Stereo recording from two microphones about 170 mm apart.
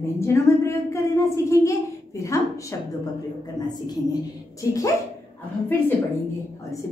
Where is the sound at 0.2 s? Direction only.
15° left (ahead or behind).